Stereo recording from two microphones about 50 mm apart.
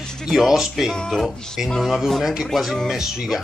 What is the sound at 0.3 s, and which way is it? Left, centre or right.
A man's voice, centre.